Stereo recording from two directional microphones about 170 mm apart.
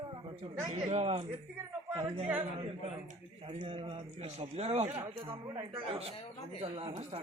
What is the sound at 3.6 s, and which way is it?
A man's voice, 30° right (ahead or behind).